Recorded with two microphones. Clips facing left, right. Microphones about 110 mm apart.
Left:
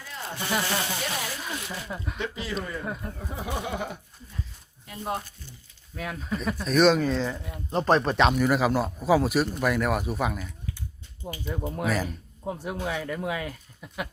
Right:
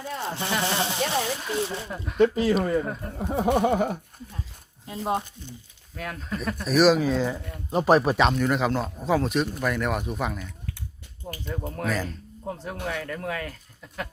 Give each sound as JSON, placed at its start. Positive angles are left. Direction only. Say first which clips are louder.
{"t": 0.0, "sound": "zipper", "louder": "right 5 dB", "side_deg": -25}
{"t": 0.6, "sound": "speech", "louder": "right 3 dB", "side_deg": -25}
{"t": 2.1, "sound": "a sound", "louder": "right 15 dB", "side_deg": -45}
{"t": 3.2, "sound": "a sound", "louder": "right 11 dB", "side_deg": -60}
{"t": 5.0, "sound": "speech", "louder": "right 5 dB", "side_deg": -20}
{"t": 6.0, "sound": "a man's voice", "louder": "left 1 dB", "side_deg": 5}